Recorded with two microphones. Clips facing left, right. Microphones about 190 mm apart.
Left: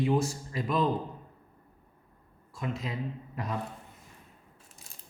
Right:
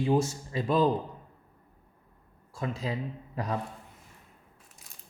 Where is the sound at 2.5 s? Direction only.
35° right (ahead or behind).